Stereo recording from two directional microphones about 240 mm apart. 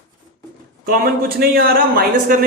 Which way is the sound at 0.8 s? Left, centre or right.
Right.